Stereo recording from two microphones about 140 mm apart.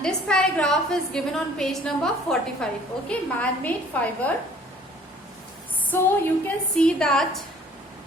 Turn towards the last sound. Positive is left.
turn(degrees=5)  # may be behind; listen again after turning